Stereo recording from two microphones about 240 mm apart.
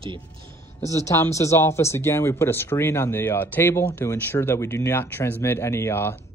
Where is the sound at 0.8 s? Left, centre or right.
Centre.